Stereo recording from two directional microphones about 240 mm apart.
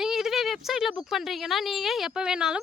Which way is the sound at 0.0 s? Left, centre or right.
Centre.